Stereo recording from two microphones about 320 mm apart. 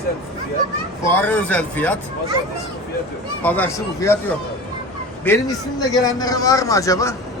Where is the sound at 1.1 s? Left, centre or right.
Centre.